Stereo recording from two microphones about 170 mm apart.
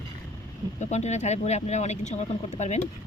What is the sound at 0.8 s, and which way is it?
Speech, 40° left (ahead or behind).